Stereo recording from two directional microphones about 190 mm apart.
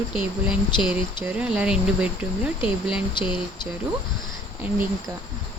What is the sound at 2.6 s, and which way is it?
Speech, 25° left (ahead or behind).